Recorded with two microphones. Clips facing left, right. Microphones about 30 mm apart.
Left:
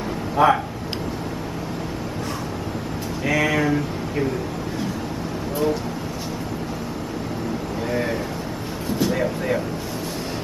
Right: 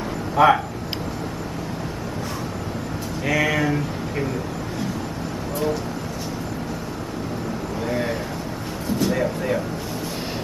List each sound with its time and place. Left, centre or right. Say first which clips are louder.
0.4 s speech: right 1 dB; centre
3.3 s speech: left 1 dB; centre
7.9 s a sound: left 1 dB; centre
9.0 s speech: even; centre